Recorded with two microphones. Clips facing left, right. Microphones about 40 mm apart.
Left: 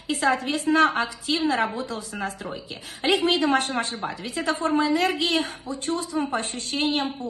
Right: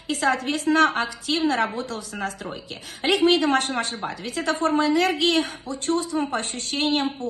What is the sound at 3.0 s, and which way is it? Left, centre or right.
A woman's voice, right.